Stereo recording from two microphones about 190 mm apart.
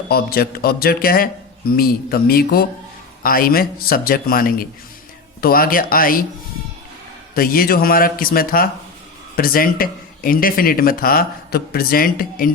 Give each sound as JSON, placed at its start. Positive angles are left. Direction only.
{"t": 0.1, "sound": "speech", "side_deg": 55}
{"t": 7.3, "sound": "speech", "side_deg": 50}